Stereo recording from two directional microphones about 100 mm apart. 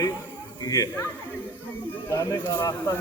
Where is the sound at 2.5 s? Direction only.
45° left (ahead or behind).